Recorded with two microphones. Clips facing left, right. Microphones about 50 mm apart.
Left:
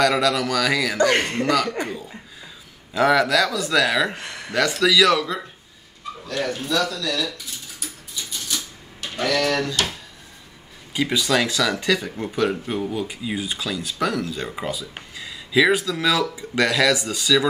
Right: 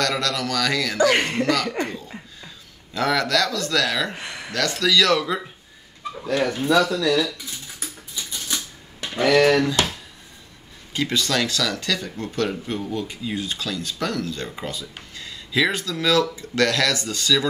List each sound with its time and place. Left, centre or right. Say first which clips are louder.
0.0 s speech: left 5 dB; centre
1.1 s speech: even; centre
1.4 s speech: left 1 dB; centre
1.8 s laughter: right 1 dB; centre
2.4 s speech: left 1 dB; centre
4.1 s speech: even; centre
4.5 s speech: left 3 dB; centre
6.2 s speech: right 5 dB; centre
9.0 s speech: right 5 dB; right
10.9 s speech: left 2 dB; centre